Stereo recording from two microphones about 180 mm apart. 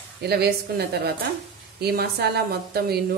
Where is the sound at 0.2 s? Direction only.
60° right (ahead or behind).